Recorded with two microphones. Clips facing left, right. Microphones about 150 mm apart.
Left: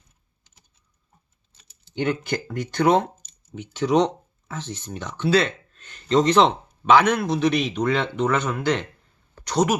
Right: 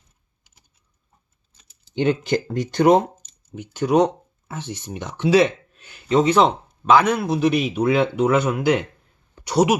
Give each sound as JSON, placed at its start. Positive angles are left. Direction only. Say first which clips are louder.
{"t": 2.0, "sound": "speech", "louder": "right 5 dB", "side_deg": -20}
{"t": 3.5, "sound": "speech", "louder": "right 2 dB", "side_deg": -5}
{"t": 9.3, "sound": "a sound", "louder": "right 3 dB", "side_deg": -10}